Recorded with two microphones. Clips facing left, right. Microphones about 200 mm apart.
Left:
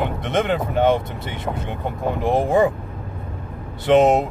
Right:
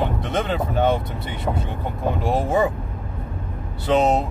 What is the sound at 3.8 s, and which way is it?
Speech, 20° left (ahead or behind).